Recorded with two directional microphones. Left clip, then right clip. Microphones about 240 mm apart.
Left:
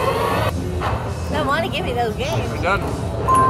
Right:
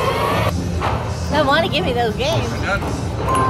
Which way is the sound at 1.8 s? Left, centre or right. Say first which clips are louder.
Right 3 dB; right.